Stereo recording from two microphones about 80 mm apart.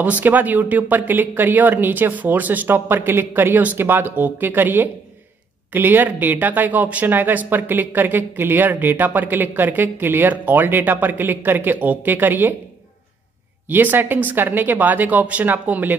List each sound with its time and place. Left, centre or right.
0.0 s speech: right
13.7 s speech: right